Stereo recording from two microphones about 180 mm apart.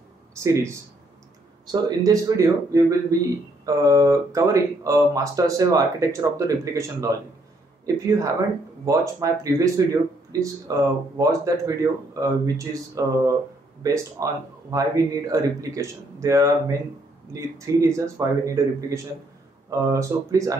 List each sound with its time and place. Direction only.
0.3 s a man's voice: 15° right (ahead or behind)